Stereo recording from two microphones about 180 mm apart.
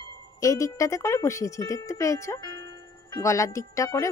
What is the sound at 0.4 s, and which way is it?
Speech, 20° left (ahead or behind).